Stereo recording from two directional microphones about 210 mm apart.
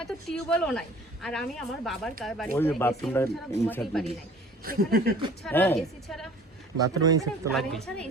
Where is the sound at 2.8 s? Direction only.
10° left (ahead or behind).